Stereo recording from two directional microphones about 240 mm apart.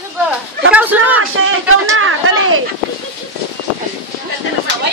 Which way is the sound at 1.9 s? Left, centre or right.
Right.